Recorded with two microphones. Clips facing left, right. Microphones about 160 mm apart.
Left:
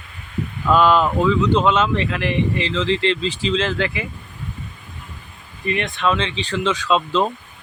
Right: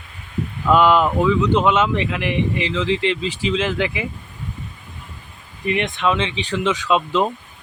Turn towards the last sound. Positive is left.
turn(degrees=-15)  # may be behind; listen again after turning